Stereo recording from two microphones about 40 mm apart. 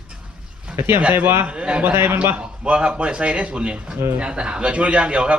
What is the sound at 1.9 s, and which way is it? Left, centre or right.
Speech, right.